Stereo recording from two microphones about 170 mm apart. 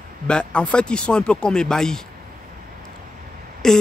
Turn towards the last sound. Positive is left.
turn(degrees=5)  # may be behind; listen again after turning